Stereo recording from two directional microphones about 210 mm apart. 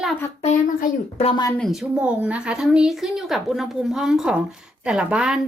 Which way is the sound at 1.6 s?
Centre (ahead or behind).